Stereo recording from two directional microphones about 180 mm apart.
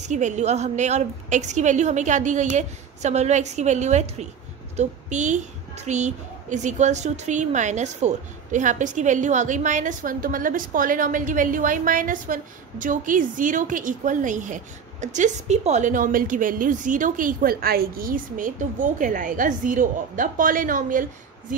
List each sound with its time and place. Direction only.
0.0 s a woman's voice: 40° right (ahead or behind)